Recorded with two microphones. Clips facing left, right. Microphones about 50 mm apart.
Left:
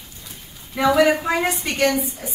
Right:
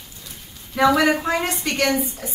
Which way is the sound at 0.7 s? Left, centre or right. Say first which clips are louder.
Even; centre.